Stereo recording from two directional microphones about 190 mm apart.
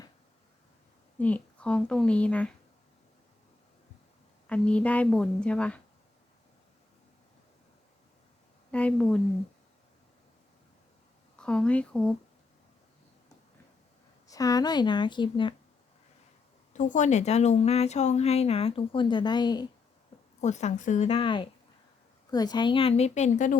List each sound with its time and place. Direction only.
1.2 s a woman's voice: 5° left (ahead or behind)
4.4 s a woman's voice: 5° left (ahead or behind)
8.7 s a woman's voice: 5° left (ahead or behind)
11.3 s a woman's voice: 5° left (ahead or behind)
14.3 s speech: 20° left (ahead or behind)
16.7 s speech: 40° left (ahead or behind); by 19.6 s 20° left (ahead or behind)
20.4 s speech: 35° left (ahead or behind)
21.1 s speech: 25° left (ahead or behind)